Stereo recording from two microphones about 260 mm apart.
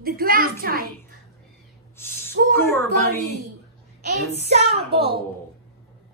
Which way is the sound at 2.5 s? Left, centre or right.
Centre.